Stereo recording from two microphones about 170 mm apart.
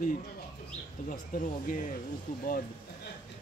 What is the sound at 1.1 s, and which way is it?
Speech, 50° left (ahead or behind).